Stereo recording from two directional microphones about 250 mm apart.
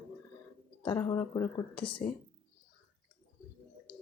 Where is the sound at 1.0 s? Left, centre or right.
Centre.